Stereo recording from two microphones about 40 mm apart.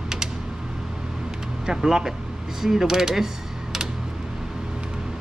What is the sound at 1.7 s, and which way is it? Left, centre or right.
Speech, centre.